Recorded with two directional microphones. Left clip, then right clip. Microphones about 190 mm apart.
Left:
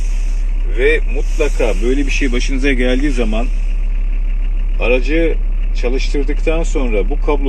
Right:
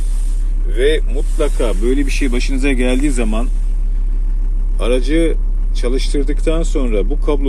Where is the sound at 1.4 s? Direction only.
30° right (ahead or behind).